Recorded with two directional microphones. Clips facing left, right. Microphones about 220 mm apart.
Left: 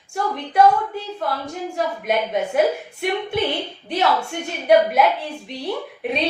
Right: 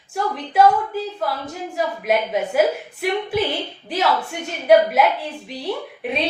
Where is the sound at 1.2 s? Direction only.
Centre (ahead or behind).